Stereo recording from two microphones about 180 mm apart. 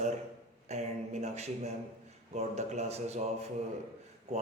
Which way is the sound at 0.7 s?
40° right (ahead or behind).